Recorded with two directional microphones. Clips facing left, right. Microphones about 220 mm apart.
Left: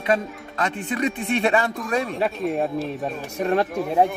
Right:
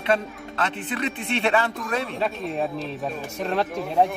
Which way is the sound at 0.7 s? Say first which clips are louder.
Left 4 dB; 40° left (ahead or behind).